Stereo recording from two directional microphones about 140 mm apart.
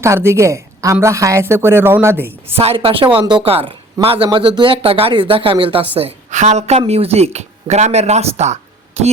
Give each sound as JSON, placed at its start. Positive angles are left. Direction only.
{"t": 0.0, "sound": "a woman's voice", "side_deg": -20}
{"t": 2.5, "sound": "speech", "side_deg": -45}
{"t": 6.0, "sound": "a woman's voice", "side_deg": -50}